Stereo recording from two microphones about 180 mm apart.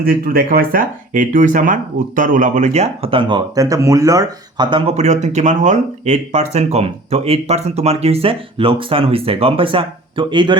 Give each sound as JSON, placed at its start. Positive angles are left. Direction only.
{"t": 0.0, "sound": "speech", "side_deg": -55}